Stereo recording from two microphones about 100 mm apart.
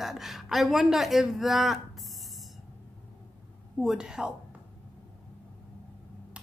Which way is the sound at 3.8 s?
5° right (ahead or behind).